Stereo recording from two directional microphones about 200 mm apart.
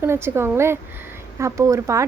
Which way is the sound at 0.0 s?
10° right (ahead or behind).